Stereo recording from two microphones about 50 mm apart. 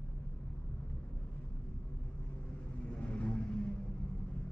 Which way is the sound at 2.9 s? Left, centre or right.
Left.